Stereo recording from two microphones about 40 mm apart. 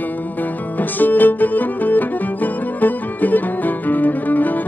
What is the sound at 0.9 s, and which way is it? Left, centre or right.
Music, left.